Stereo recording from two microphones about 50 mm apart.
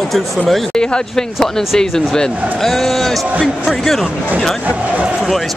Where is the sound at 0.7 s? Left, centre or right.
Centre.